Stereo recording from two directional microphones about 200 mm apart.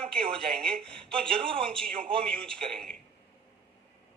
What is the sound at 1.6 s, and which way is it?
Speech, 5° left (ahead or behind).